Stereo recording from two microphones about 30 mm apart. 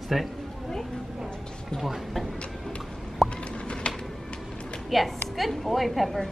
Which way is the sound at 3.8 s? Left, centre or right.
Left.